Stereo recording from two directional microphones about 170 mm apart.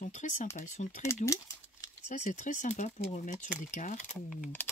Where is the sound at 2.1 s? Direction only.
45° left (ahead or behind).